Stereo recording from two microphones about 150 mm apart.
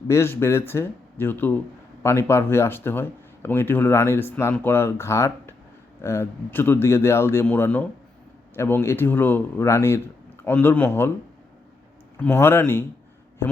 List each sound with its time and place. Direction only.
0.1 s speech: 15° left (ahead or behind)
12.1 s speech: 15° left (ahead or behind)